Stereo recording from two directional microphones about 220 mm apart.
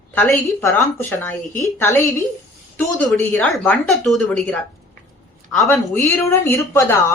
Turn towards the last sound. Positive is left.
turn(degrees=10)  # may be behind; listen again after turning